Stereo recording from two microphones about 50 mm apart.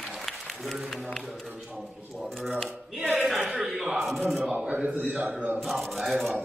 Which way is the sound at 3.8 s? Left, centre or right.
Centre.